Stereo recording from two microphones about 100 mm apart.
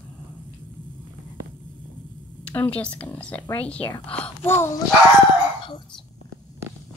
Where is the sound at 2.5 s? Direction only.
10° left (ahead or behind).